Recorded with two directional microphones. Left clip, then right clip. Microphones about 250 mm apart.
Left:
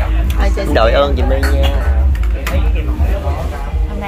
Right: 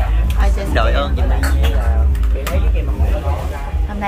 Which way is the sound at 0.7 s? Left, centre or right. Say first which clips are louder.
Left 8 dB; centre.